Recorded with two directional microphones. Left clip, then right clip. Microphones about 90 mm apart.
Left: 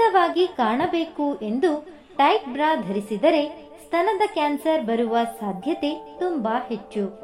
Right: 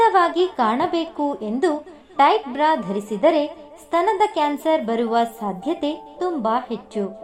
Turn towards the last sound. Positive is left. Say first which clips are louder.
# right 2 dB
turn(degrees=-15)  # may be behind; listen again after turning